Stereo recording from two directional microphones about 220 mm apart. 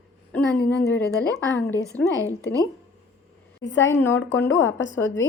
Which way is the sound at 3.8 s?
10° left (ahead or behind).